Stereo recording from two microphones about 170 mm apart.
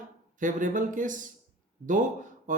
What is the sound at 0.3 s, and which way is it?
Speech, 50° right (ahead or behind).